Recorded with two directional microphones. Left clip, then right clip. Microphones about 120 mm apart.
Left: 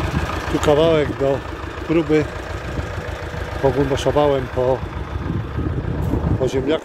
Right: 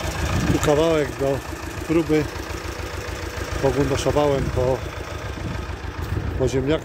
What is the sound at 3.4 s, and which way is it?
Vehicle, 90° right.